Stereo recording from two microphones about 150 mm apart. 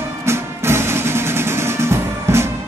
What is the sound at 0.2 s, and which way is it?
Music, 15° right (ahead or behind).